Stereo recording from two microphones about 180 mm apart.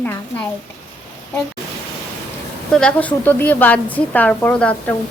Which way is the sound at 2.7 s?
5° left (ahead or behind).